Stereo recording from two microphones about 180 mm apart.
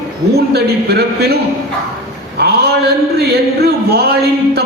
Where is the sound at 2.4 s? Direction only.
65° right (ahead or behind).